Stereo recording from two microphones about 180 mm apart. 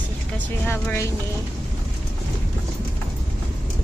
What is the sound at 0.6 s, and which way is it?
Speech, 10° left (ahead or behind).